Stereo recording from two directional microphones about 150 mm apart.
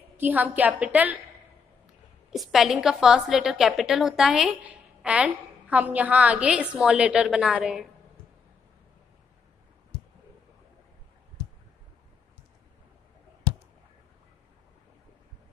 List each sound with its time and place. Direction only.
0.2 s a woman's voice: 10° right (ahead or behind)
2.3 s a woman's voice: centre (ahead or behind)